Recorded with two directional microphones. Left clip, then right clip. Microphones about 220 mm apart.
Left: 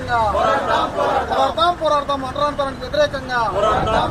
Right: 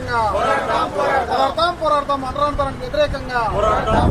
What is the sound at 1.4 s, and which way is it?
Speech, 5° left (ahead or behind).